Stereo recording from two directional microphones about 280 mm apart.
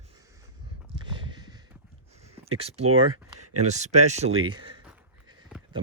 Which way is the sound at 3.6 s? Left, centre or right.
Right.